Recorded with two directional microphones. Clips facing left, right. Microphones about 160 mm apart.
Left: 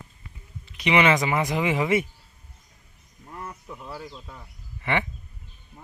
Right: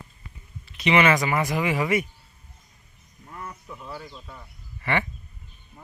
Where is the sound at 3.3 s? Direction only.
20° left (ahead or behind).